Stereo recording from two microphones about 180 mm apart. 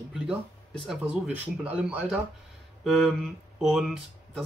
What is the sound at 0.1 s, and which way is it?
Speech, centre (ahead or behind).